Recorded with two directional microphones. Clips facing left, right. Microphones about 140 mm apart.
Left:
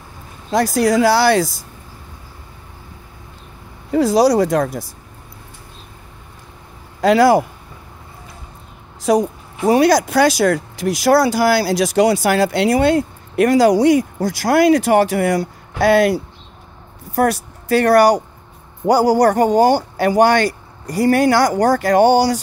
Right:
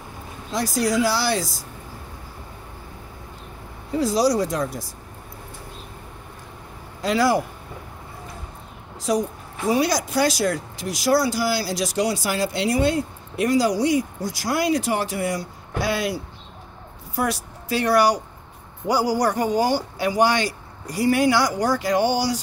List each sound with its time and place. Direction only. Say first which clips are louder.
0.5 s a man's voice: left 7 dB; 65° left (ahead or behind)
3.9 s a man's voice: left 7 dB; 65° left (ahead or behind)
7.0 s speech: left 8 dB; 70° left (ahead or behind)
9.1 s a man's voice: left 7 dB; 65° left (ahead or behind)